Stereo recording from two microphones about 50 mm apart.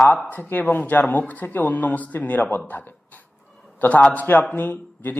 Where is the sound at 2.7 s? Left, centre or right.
Left.